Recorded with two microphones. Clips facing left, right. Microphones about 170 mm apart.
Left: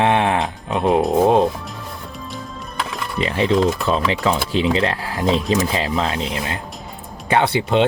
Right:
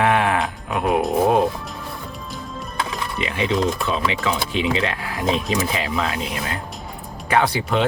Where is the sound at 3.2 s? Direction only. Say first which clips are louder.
Left 4 dB; 35° left (ahead or behind).